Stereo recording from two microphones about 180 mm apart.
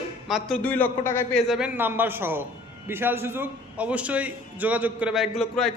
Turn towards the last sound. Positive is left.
turn(degrees=0)  # may be behind; listen again after turning